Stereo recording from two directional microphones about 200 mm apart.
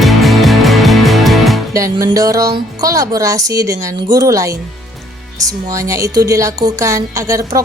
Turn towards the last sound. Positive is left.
turn(degrees=-15)  # may be behind; listen again after turning